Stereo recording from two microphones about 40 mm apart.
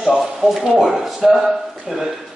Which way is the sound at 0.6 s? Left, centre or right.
Centre.